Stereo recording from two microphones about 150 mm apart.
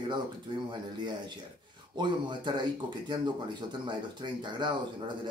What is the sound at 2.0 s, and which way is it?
Speech, 30° right (ahead or behind).